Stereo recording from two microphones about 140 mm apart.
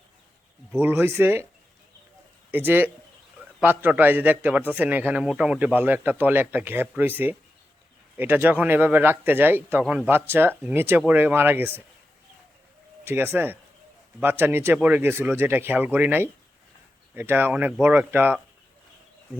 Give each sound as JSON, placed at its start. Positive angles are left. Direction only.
{"t": 0.8, "sound": "a man's voice", "side_deg": -15}
{"t": 2.5, "sound": "a man's voice", "side_deg": -15}
{"t": 8.1, "sound": "a man's voice", "side_deg": -15}
{"t": 13.1, "sound": "a man's voice", "side_deg": -15}